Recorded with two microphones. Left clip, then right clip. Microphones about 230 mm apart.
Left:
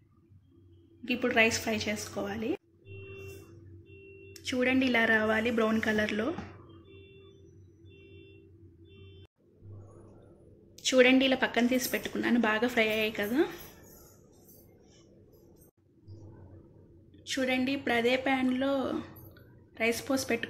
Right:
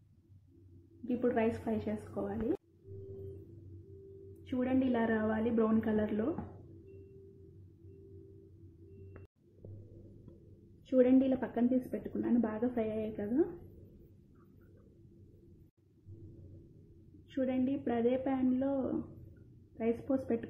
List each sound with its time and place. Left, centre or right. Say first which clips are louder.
1.0 s a woman's voice: left 6 dB; centre
4.5 s a woman's voice: left 6 dB; centre
11.0 s a woman's voice: left 5 dB; centre
17.4 s a woman's voice: left 4 dB; centre